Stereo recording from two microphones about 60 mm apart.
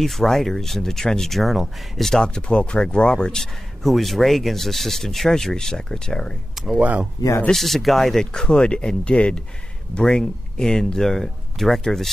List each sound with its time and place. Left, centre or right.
0.0 s speech: centre
2.2 s speech: centre
3.3 s speech: centre
6.5 s speech: centre
6.8 s speech: right
7.5 s speech: centre